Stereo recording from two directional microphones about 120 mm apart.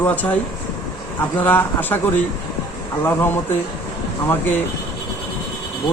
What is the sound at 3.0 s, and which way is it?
Speech, 20° left (ahead or behind).